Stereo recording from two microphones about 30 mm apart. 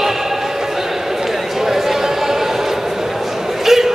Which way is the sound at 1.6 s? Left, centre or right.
Centre.